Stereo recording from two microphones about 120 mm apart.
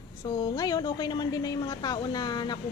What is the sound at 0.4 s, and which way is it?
A woman's voice, 35° left (ahead or behind).